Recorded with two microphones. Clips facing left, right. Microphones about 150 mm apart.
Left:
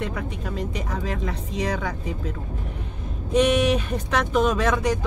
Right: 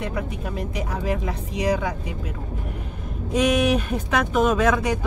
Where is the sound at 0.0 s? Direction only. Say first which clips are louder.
Right 1 dB; 5° right (ahead or behind).